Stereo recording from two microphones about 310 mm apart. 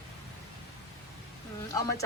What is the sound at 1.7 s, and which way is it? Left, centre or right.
Speech, centre.